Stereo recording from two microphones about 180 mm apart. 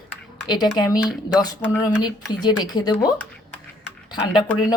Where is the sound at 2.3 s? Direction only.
25° left (ahead or behind).